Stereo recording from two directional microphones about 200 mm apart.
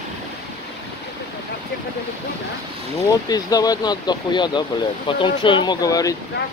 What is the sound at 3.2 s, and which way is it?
Speech, 20° left (ahead or behind).